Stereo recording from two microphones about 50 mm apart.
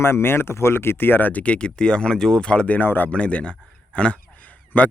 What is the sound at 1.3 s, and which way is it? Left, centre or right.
Speech, left.